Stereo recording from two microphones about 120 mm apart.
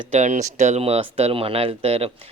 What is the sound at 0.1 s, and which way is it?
Speech, 75° right (ahead or behind).